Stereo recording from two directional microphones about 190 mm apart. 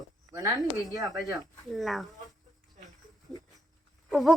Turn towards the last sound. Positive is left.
turn(degrees=0)  # may be behind; listen again after turning